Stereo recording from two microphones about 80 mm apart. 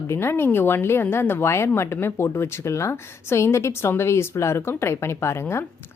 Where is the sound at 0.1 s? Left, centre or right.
Left.